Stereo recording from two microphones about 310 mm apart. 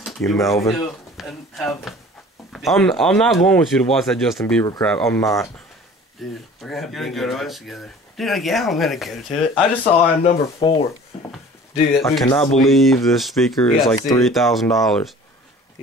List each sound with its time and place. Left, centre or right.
0.0 s speech: centre
9.9 s speech: centre
12.0 s speech: centre
13.9 s speech: centre
14.4 s speech: centre